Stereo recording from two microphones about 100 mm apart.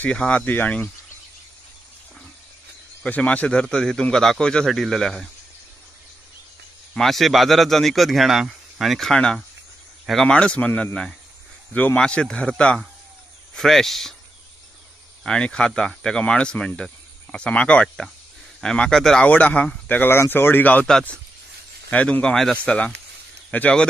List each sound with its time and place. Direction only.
0.0 s speech: 10° left (ahead or behind)
3.0 s speech: 10° left (ahead or behind)
6.9 s speech: centre (ahead or behind)
15.2 s speech: 10° left (ahead or behind)
21.9 s speech: 10° left (ahead or behind)